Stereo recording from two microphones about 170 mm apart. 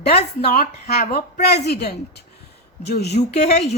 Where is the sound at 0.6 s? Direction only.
65° left (ahead or behind).